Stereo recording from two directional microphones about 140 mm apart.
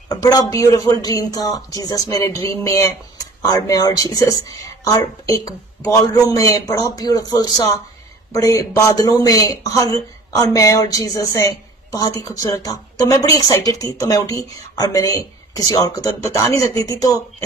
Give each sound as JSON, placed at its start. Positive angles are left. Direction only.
{"t": 0.1, "sound": "speech", "side_deg": 25}